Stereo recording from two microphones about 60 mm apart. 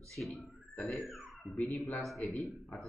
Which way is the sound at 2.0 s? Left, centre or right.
Centre.